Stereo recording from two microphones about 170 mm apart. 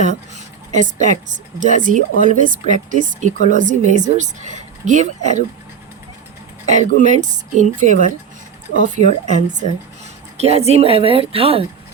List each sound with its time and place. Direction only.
0.0 s speech: 45° right (ahead or behind)
7.0 s speech: 45° right (ahead or behind)